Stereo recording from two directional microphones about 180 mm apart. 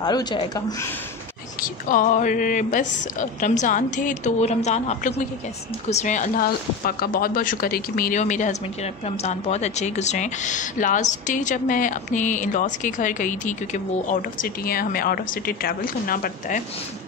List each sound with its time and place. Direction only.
0.0 s speech: 20° left (ahead or behind)
1.6 s a woman's voice: 50° left (ahead or behind)